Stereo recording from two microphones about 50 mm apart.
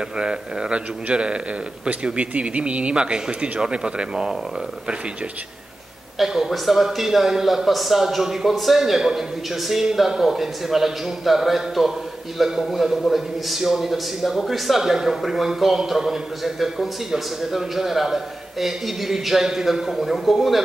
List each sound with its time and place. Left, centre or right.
0.2 s speech: centre
6.1 s a man's voice: centre